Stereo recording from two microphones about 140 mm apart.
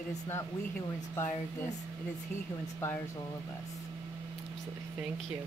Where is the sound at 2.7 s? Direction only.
15° left (ahead or behind).